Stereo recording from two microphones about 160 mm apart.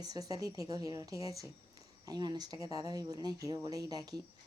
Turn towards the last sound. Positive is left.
turn(degrees=-25)  # may be behind; listen again after turning